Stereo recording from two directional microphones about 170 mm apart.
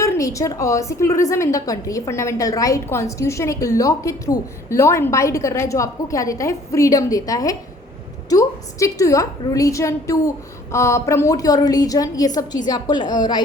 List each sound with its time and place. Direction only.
0.0 s a woman's voice: 20° left (ahead or behind)